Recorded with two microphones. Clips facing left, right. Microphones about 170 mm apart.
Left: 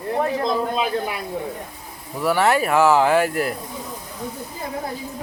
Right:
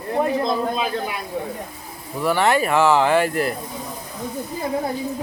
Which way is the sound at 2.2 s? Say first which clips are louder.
Even; 5° left (ahead or behind).